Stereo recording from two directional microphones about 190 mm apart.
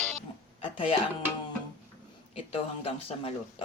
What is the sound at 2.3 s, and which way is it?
Speech, 30° left (ahead or behind).